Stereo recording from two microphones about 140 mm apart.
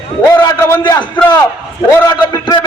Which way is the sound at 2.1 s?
30° left (ahead or behind).